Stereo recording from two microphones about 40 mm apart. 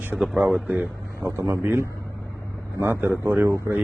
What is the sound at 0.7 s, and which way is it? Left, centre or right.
Speech, right.